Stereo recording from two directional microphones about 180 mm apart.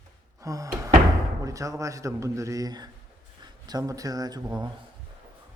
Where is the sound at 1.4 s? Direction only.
20° right (ahead or behind).